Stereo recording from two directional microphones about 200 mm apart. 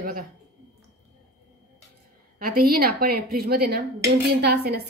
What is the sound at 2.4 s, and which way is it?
A woman's voice, 50° right (ahead or behind).